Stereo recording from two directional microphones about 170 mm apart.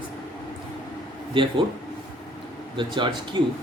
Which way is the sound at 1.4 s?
30° right (ahead or behind).